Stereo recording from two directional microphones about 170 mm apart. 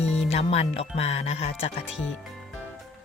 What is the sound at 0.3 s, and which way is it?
Speech, 40° left (ahead or behind).